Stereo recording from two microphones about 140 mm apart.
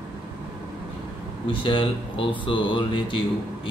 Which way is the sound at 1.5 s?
35° left (ahead or behind).